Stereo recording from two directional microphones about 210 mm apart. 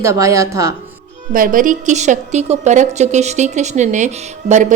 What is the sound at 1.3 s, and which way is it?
A woman's voice, 40° right (ahead or behind).